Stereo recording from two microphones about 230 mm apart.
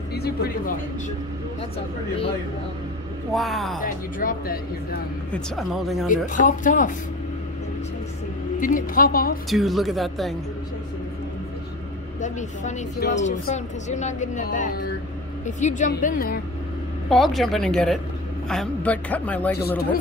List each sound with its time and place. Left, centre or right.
0.1 s speech: left
3.3 s speech: centre
3.8 s speech: left
5.3 s speech: centre
6.0 s speech: left
8.5 s speech: left
9.5 s speech: centre
12.2 s speech: left
17.1 s a man's voice: centre